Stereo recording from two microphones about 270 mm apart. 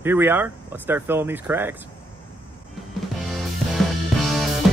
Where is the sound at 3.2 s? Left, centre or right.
Centre.